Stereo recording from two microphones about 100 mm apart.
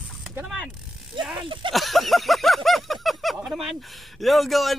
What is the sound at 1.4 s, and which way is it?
Speech, 55° right (ahead or behind).